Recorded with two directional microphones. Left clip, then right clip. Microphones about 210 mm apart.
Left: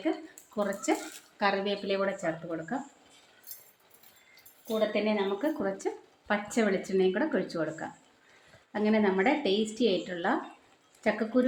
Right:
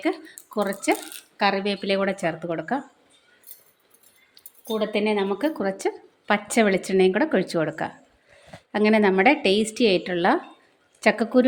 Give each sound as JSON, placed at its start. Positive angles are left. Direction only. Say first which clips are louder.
{"t": 0.5, "sound": "a woman's voice", "louder": "right 6 dB", "side_deg": -40}
{"t": 4.7, "sound": "a woman's voice", "louder": "right 5 dB", "side_deg": -55}